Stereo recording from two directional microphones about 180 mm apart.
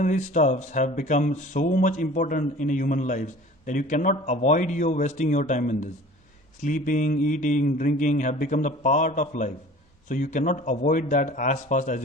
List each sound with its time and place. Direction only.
0.0 s speech: 45° left (ahead or behind)